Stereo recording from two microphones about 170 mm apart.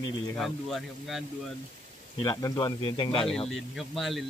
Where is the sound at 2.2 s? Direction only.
25° left (ahead or behind).